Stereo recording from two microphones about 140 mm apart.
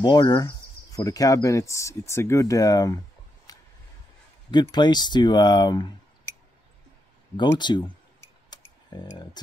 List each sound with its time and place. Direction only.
0.0 s speech: 35° left (ahead or behind)
3.5 s a sound: 25° left (ahead or behind)
4.5 s speech: 30° left (ahead or behind)
7.3 s speech: 30° left (ahead or behind)